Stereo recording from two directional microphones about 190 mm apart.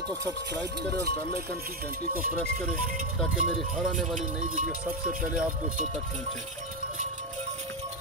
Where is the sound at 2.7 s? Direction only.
50° right (ahead or behind).